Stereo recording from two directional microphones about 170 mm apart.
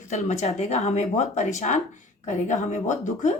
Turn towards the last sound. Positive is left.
turn(degrees=45)  # may be behind; listen again after turning